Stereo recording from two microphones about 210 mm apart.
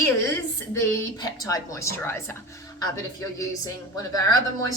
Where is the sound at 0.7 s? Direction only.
15° left (ahead or behind).